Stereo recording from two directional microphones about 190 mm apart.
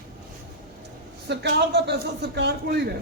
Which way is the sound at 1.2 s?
60° right (ahead or behind).